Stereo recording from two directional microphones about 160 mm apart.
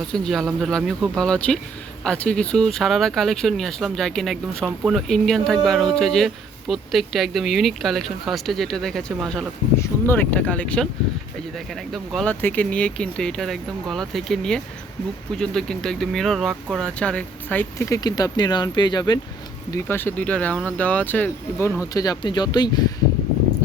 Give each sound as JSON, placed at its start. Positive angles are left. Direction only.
{"t": 0.1, "sound": "speech", "side_deg": 0}
{"t": 9.7, "sound": "speech", "side_deg": 15}
{"t": 19.7, "sound": "speech", "side_deg": 15}
{"t": 21.9, "sound": "speech", "side_deg": 25}